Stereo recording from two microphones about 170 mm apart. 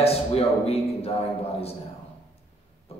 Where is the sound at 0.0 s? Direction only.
35° left (ahead or behind).